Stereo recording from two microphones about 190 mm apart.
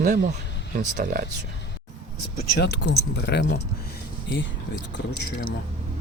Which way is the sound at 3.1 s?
65° left (ahead or behind).